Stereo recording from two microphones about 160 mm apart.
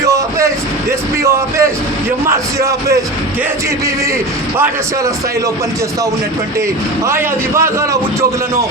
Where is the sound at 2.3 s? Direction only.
20° right (ahead or behind).